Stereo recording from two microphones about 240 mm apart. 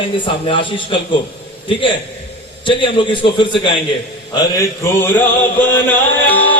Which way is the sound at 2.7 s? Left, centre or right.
Left.